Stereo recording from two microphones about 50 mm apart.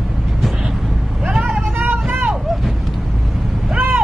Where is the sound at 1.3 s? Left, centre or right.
Centre.